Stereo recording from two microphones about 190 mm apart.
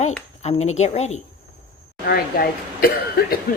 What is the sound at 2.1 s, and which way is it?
Speech, 50° left (ahead or behind).